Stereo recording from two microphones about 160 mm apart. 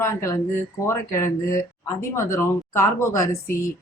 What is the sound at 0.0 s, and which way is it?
Speech, 20° left (ahead or behind).